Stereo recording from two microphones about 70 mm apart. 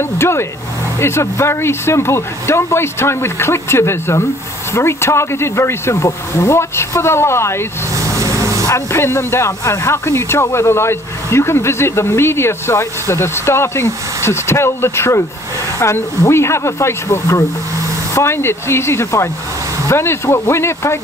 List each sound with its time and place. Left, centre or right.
0.2 s speech: left
7.9 s vehicle: right
8.6 s speech: left
16.3 s speech: left